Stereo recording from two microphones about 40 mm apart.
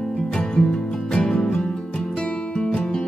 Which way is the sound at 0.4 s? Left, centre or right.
Left.